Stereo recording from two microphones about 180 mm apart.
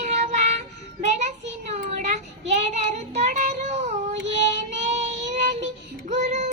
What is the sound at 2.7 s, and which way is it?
Child singing, 40° right (ahead or behind).